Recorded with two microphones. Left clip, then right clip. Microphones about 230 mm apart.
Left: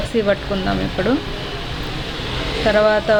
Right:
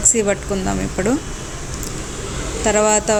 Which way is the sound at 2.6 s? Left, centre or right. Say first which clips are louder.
Left 1 dB; right.